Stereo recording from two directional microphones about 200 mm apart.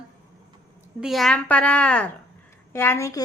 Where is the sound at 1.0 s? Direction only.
Centre (ahead or behind).